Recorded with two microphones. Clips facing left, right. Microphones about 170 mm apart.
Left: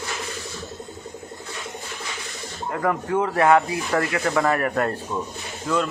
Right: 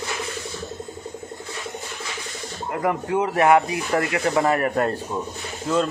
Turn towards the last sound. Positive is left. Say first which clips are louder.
# right 2 dB
turn(degrees=-25)  # may be behind; listen again after turning